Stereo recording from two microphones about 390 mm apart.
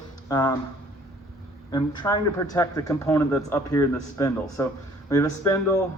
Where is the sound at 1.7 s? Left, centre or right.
Centre.